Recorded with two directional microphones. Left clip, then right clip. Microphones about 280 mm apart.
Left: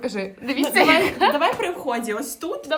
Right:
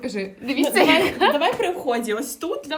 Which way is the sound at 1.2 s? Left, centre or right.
Left.